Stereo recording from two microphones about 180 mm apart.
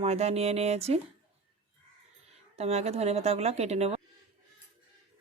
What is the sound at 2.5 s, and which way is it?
Speech, 35° right (ahead or behind).